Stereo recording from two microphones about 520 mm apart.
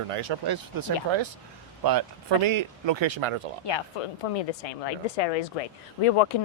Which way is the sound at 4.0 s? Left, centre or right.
Left.